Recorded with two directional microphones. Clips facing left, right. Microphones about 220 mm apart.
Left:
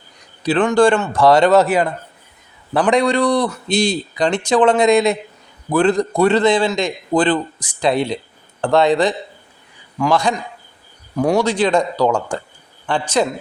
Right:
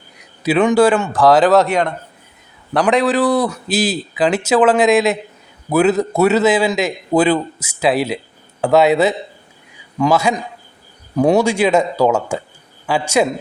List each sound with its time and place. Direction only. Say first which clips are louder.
0.4 s a man's voice: right 1 dB; 10° right (ahead or behind)